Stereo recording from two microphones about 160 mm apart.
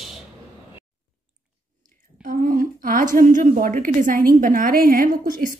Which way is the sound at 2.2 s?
60° right (ahead or behind).